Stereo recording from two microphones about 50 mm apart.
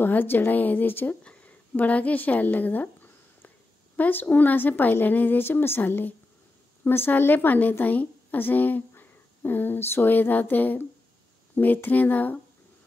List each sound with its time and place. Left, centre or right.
0.0 s speech: left
1.2 s a sound: left
1.8 s speech: left
6.8 s a woman's voice: left
7.1 s a woman's voice: left